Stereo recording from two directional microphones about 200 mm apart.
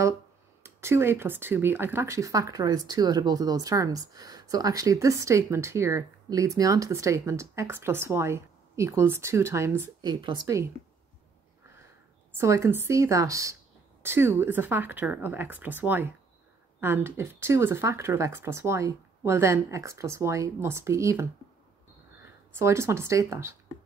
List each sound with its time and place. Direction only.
0.7 s a woman's voice: 15° right (ahead or behind)
12.3 s speech: 15° right (ahead or behind)
22.6 s speech: 15° right (ahead or behind)